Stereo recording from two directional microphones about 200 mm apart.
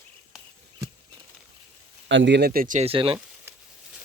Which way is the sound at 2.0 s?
65° right (ahead or behind).